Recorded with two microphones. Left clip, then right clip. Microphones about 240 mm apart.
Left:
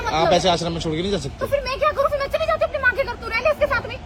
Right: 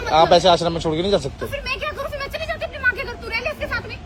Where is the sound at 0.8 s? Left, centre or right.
Right.